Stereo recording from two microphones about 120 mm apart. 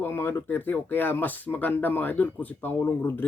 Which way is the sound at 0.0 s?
20° left (ahead or behind).